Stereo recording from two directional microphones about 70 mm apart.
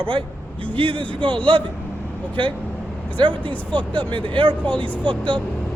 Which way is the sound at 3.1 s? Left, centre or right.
Left.